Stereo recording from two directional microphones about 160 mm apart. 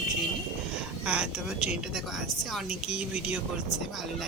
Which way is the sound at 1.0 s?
5° right (ahead or behind).